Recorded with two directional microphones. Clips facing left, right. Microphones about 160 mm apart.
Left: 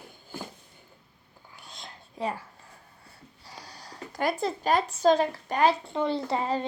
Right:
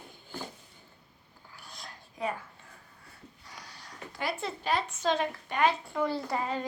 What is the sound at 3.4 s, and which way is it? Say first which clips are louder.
Speech: left 5 dB; 30° left (ahead or behind).